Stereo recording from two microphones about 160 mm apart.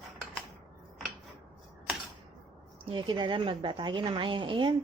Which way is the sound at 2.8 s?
30° right (ahead or behind).